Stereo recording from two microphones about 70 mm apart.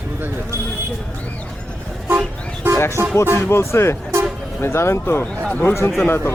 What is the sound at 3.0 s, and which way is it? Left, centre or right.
Music, right.